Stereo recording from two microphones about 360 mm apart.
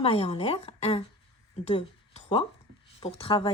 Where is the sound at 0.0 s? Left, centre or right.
Centre.